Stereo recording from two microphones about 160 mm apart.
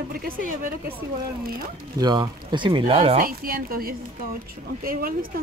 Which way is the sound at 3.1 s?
65° right (ahead or behind).